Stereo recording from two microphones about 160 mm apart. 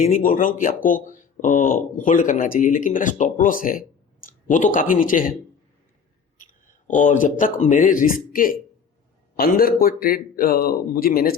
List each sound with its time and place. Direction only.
0.0 s speech: 60° left (ahead or behind)
6.4 s speech: 50° left (ahead or behind)